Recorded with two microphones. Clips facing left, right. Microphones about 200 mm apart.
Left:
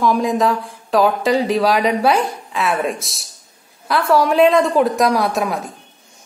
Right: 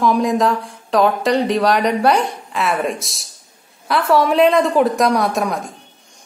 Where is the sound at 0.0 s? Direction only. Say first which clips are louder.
Right 1 dB; centre (ahead or behind).